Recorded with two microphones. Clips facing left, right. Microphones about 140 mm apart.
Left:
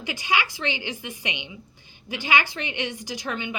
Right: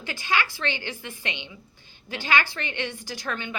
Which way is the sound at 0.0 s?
15° left (ahead or behind).